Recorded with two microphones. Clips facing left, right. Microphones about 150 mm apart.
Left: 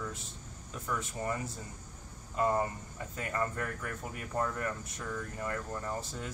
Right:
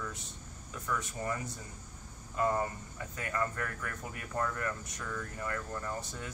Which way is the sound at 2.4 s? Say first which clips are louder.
Left 1 dB; 25° left (ahead or behind).